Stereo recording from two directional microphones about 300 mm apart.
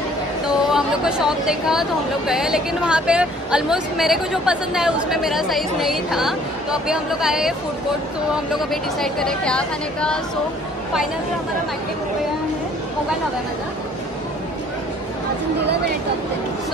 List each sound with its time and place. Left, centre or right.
0.7 s speech: centre
15.6 s speech: right